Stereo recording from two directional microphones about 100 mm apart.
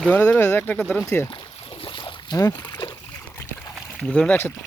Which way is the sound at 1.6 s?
65° left (ahead or behind).